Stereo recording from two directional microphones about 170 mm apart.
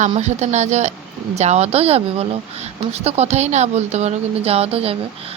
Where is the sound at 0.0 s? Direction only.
45° right (ahead or behind).